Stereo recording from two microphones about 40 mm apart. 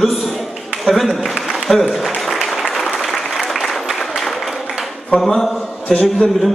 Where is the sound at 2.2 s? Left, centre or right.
Centre.